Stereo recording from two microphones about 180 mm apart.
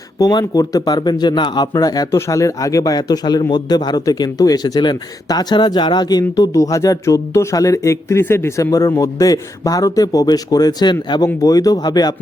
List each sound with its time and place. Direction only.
0.2 s speech: 20° left (ahead or behind)